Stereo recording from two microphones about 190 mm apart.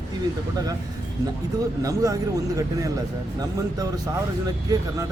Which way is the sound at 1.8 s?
15° right (ahead or behind).